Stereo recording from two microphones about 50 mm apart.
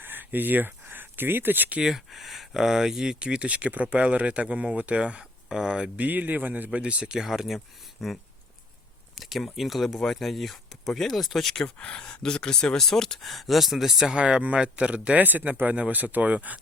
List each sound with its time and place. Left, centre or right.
0.0 s speech: right
2.0 s speech: centre; by 5.2 s right
5.5 s speech: centre
6.0 s speech: right
6.7 s speech: right
7.2 s speech: centre
11.6 s speech: centre
14.3 s speech: right
15.3 s speech: right